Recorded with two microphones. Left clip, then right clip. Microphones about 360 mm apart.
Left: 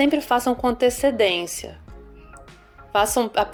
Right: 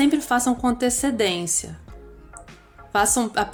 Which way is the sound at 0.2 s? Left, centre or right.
Centre.